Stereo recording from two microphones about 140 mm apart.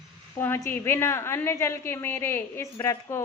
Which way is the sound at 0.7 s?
15° left (ahead or behind).